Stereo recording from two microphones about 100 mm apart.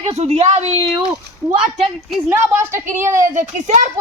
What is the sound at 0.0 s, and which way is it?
Speech, 90° right.